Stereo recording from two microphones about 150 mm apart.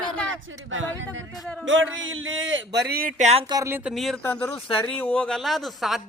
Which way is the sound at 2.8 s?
85° right.